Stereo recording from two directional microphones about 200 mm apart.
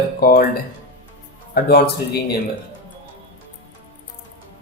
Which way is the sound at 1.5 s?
50° left (ahead or behind).